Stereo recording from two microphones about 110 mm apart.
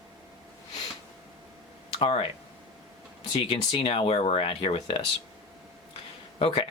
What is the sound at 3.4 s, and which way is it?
Speech, 55° left (ahead or behind).